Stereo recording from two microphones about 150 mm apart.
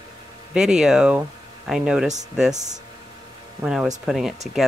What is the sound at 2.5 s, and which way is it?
Speech, 50° right (ahead or behind).